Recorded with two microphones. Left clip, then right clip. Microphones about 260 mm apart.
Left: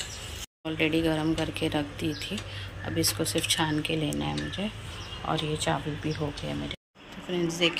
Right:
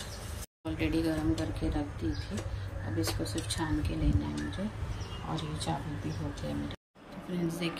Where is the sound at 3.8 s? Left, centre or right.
Centre.